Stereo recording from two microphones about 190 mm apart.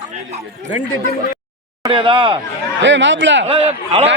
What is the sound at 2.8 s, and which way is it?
Speech, 70° right (ahead or behind).